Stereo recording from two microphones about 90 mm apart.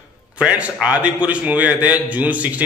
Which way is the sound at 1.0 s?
15° right (ahead or behind).